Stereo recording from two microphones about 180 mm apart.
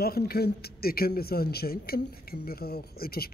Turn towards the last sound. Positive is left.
turn(degrees=60)  # may be behind; listen again after turning